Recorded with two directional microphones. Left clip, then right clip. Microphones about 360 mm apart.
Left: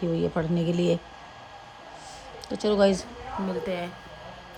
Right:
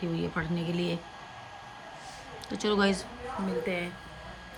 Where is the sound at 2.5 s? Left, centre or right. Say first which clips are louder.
Left 5 dB; centre.